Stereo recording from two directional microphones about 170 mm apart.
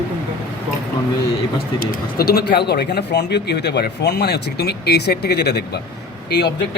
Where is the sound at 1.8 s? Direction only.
65° left (ahead or behind).